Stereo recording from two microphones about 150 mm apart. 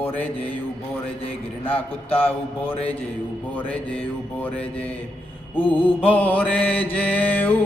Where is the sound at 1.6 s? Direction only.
10° left (ahead or behind).